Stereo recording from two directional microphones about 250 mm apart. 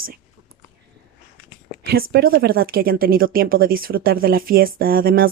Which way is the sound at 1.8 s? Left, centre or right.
Right.